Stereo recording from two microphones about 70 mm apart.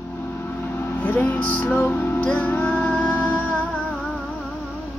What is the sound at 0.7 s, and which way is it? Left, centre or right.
Music, left.